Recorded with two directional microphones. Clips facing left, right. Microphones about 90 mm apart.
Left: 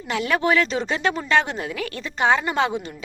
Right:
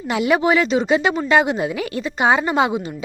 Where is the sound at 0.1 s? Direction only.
15° right (ahead or behind).